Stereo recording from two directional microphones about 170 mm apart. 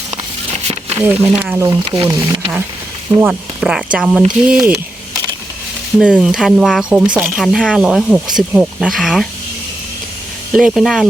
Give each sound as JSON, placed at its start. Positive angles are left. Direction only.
{"t": 0.5, "sound": "a sound", "side_deg": -35}
{"t": 0.9, "sound": "speech", "side_deg": -15}
{"t": 1.8, "sound": "speech", "side_deg": -30}
{"t": 3.2, "sound": "speech", "side_deg": -5}
{"t": 6.0, "sound": "speech", "side_deg": -5}
{"t": 10.5, "sound": "speech", "side_deg": 0}